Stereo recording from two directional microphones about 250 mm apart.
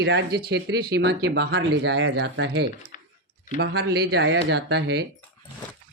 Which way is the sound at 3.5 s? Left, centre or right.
Right.